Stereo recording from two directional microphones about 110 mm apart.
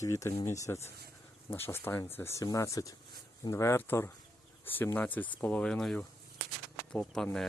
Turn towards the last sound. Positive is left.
turn(degrees=5)  # may be behind; listen again after turning